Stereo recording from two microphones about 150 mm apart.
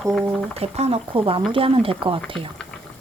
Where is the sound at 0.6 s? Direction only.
45° right (ahead or behind).